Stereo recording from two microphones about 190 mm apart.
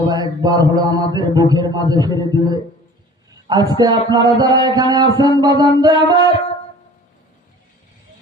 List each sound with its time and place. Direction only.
0.1 s a man's voice: 20° right (ahead or behind)
3.5 s a man's voice: 20° right (ahead or behind)